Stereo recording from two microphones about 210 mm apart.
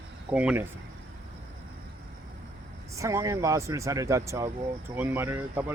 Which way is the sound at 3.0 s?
15° right (ahead or behind).